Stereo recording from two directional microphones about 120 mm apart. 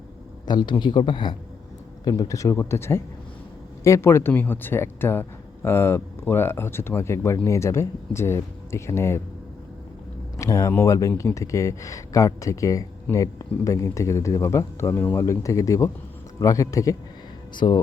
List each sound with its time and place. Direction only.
0.4 s a man's voice: 40° left (ahead or behind)
2.0 s speech: 30° left (ahead or behind)
10.3 s speech: 25° left (ahead or behind)
17.5 s a man's voice: 40° left (ahead or behind)